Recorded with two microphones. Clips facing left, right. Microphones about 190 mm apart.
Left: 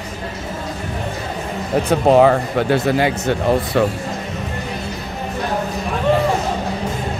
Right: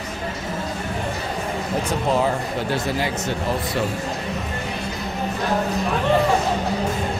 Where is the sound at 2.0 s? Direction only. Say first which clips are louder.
Left 11 dB; 65° left (ahead or behind).